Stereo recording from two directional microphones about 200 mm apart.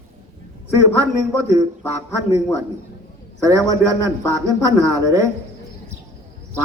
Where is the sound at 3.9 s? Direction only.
15° right (ahead or behind).